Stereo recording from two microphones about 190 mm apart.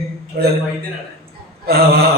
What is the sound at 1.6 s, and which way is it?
Speech, 55° right (ahead or behind).